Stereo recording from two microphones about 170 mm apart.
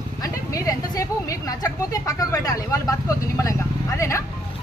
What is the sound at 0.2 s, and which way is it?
A woman's voice, 20° left (ahead or behind).